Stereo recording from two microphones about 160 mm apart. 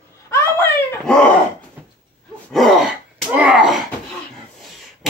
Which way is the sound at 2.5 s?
Centre (ahead or behind).